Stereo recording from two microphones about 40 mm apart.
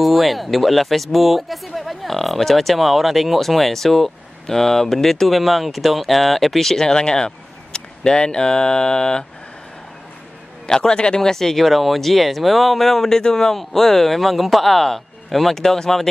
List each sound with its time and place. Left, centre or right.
0.0 s speech: centre
10.7 s a man's voice: centre